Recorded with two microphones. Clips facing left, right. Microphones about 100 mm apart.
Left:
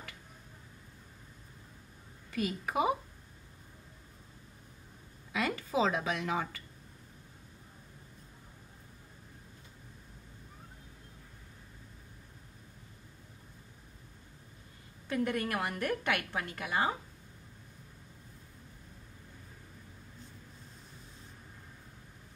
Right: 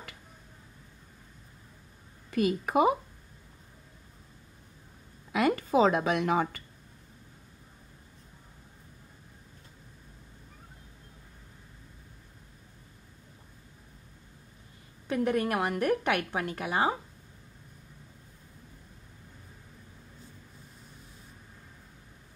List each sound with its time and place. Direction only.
2.3 s a woman's voice: 55° right (ahead or behind)
5.3 s a woman's voice: 55° right (ahead or behind)
15.0 s a woman's voice: 20° right (ahead or behind)